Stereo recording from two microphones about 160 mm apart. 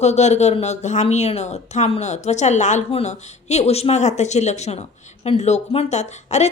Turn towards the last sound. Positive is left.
turn(degrees=45)  # may be behind; listen again after turning